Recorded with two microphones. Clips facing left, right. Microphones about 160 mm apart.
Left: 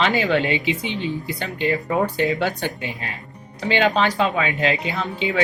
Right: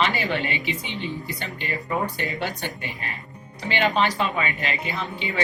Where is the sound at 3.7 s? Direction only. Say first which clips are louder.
Left 3 dB; 90° left.